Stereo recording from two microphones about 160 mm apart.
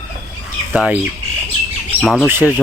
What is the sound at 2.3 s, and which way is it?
Speech, 15° right (ahead or behind).